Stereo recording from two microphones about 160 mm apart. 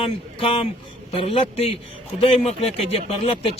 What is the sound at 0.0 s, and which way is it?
Speech, 35° left (ahead or behind).